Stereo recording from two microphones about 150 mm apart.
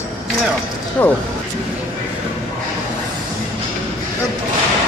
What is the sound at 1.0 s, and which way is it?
Speech, 10° left (ahead or behind).